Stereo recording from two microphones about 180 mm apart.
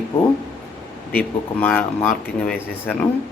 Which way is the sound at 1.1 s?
10° left (ahead or behind).